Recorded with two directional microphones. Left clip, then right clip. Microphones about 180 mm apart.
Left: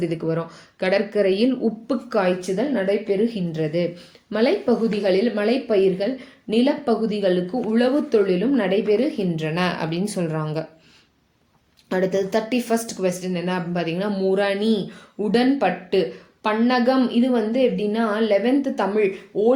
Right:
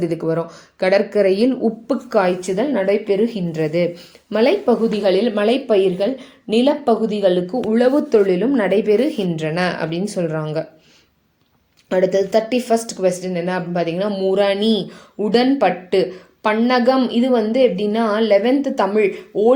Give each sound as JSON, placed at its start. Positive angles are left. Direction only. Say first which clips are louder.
{"t": 0.0, "sound": "speech", "louder": "right 4 dB", "side_deg": -20}
{"t": 8.9, "sound": "a woman's voice", "louder": "right 4 dB", "side_deg": -45}
{"t": 9.5, "sound": "speech", "louder": "right 4 dB", "side_deg": -5}
{"t": 11.9, "sound": "speech", "louder": "right 5 dB", "side_deg": -5}